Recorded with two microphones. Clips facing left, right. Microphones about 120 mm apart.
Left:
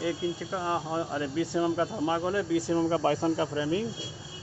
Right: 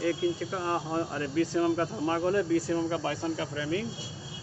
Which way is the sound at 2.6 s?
25° left (ahead or behind).